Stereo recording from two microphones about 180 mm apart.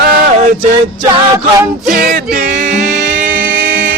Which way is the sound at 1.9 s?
55° right (ahead or behind).